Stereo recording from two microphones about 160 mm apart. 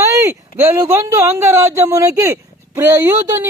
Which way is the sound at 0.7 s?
15° right (ahead or behind).